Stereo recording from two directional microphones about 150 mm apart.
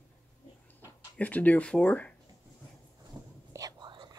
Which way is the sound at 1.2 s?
10° left (ahead or behind).